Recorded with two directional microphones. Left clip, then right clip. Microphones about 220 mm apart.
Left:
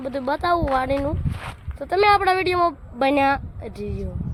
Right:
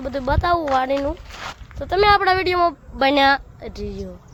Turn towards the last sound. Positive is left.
turn(degrees=5)  # may be behind; listen again after turning